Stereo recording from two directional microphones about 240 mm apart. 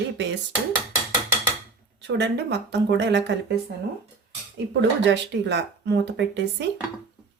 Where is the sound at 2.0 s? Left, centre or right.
Right.